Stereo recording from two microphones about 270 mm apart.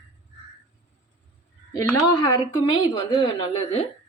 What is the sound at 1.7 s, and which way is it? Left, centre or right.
A woman's voice, centre.